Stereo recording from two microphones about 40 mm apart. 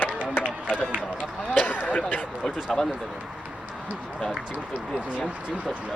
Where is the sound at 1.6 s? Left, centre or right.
Left.